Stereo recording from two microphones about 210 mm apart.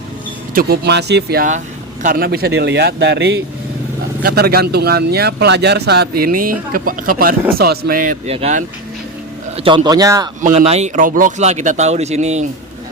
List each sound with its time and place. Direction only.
0.5 s speech: 50° right (ahead or behind); by 10.2 s 15° right (ahead or behind)
10.4 s speech: 30° right (ahead or behind)